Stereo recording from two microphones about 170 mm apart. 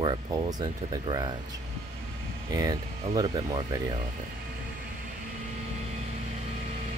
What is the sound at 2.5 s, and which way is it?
Speech, 20° right (ahead or behind).